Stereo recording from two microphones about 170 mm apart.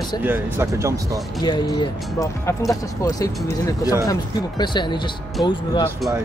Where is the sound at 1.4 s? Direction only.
25° left (ahead or behind).